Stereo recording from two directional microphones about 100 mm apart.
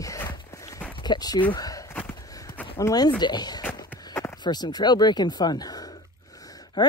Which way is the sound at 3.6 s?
30° left (ahead or behind).